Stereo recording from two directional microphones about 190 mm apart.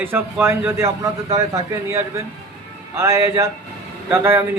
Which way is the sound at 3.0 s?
15° right (ahead or behind).